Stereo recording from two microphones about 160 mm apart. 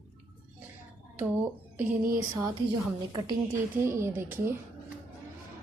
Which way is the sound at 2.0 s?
60° right (ahead or behind).